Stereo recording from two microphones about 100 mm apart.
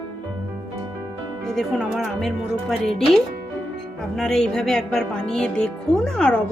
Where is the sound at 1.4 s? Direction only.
Centre (ahead or behind).